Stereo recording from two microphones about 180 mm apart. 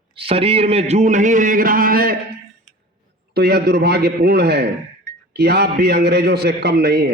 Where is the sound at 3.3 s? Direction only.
60° right (ahead or behind).